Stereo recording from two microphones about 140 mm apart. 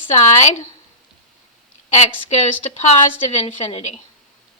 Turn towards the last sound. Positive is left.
turn(degrees=45)  # may be behind; listen again after turning